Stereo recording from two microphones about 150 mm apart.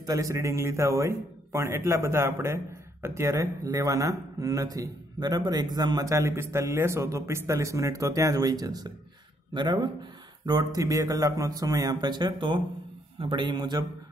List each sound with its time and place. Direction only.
0.0 s a man's voice: 20° right (ahead or behind)